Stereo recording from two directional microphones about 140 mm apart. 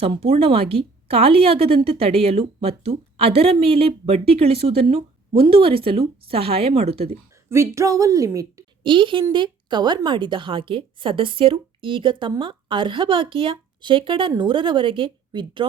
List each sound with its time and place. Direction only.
0.0 s a woman's voice: 45° right (ahead or behind)
7.5 s a woman's voice: 20° right (ahead or behind)
8.8 s a woman's voice: 35° right (ahead or behind)